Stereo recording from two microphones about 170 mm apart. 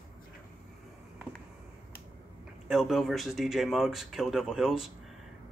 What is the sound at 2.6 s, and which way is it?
Speech, centre (ahead or behind).